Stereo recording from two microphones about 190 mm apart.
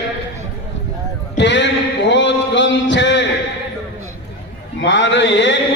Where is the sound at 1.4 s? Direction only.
70° left (ahead or behind).